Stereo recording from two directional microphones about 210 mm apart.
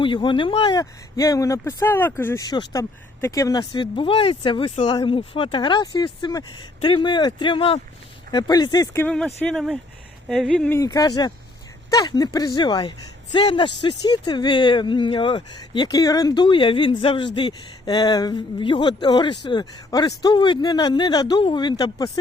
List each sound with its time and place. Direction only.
0.0 s speech: 25° left (ahead or behind)